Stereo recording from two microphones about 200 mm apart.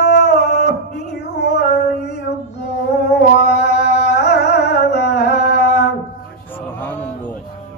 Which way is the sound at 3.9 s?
55° left (ahead or behind).